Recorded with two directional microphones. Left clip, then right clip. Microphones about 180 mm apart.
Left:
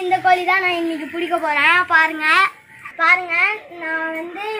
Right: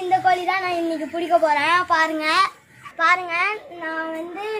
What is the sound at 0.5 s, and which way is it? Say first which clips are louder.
Speech: left 5 dB; 25° right (ahead or behind).